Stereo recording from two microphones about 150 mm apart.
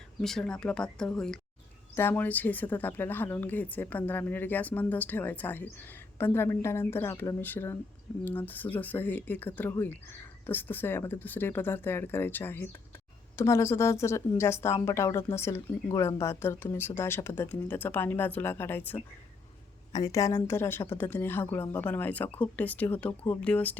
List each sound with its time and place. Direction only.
0.2 s a woman's voice: 5° left (ahead or behind)